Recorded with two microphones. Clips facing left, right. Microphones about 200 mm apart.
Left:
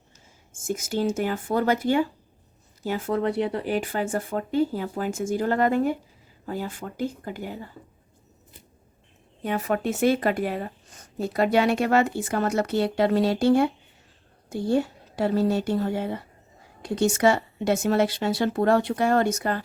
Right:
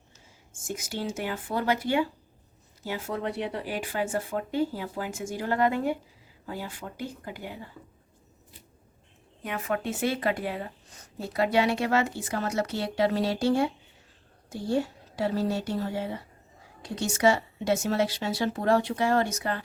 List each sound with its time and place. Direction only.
0.6 s speech: 45° left (ahead or behind)
9.4 s speech: 35° left (ahead or behind)